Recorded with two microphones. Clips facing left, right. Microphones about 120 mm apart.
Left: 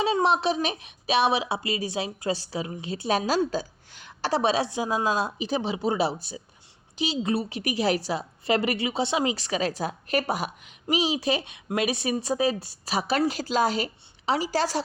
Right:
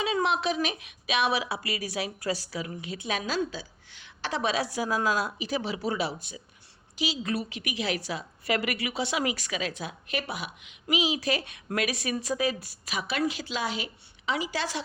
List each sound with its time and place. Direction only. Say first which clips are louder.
0.0 s a woman's voice: left 4 dB; 35° left (ahead or behind)